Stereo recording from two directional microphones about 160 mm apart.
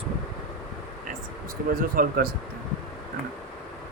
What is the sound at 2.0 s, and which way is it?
Speech, 60° right (ahead or behind).